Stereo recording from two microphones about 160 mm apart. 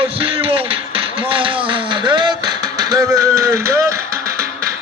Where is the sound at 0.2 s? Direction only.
35° right (ahead or behind).